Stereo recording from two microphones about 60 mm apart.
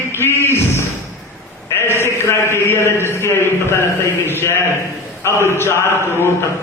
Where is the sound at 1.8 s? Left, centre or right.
Left.